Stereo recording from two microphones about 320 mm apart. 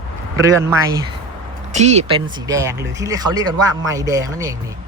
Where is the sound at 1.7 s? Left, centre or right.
Right.